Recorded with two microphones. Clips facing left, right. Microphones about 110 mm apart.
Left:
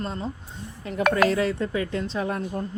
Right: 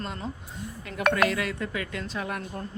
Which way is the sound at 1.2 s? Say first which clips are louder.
Left 5 dB; 30° left (ahead or behind).